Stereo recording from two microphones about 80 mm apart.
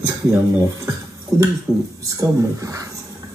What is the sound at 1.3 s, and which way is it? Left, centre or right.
Speech, right.